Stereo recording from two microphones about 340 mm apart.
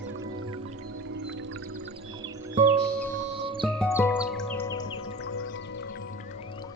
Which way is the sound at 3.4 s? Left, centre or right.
Centre.